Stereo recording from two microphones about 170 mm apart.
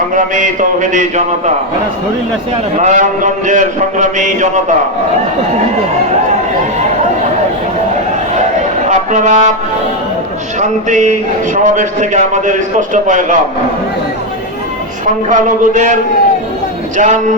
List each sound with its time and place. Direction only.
0.1 s a man's voice: 50° right (ahead or behind)
2.7 s a man's voice: 45° right (ahead or behind)
8.9 s speech: 45° right (ahead or behind)
10.6 s a man's voice: 45° right (ahead or behind)
15.3 s a man's voice: 50° right (ahead or behind)
17.0 s a man's voice: 45° right (ahead or behind)